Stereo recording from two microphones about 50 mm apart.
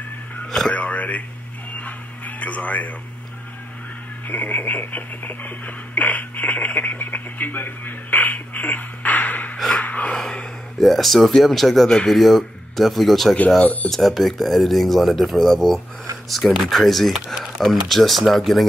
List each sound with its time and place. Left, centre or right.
0.5 s radio: centre
0.7 s speech: left
1.8 s a sound: left
4.3 s speech: left
10.1 s gasp: centre
10.8 s speech: centre